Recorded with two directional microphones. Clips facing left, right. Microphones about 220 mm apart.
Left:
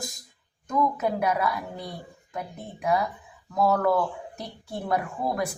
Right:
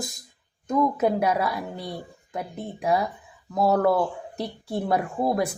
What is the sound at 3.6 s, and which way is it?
A woman's voice, 30° right (ahead or behind).